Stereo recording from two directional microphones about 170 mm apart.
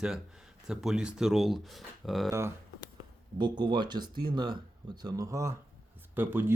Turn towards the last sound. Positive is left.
turn(degrees=-10)  # may be behind; listen again after turning